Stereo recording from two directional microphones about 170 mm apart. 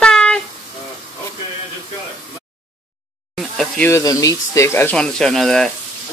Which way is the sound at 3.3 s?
Centre (ahead or behind).